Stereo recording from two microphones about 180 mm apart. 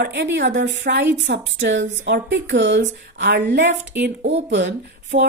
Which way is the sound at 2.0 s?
70° right (ahead or behind).